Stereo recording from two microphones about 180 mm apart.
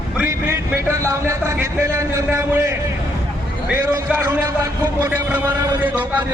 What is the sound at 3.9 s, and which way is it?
A man's voice, 15° right (ahead or behind).